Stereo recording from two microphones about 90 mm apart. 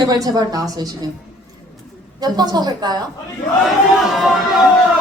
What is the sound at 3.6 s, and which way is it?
Chatter, centre (ahead or behind).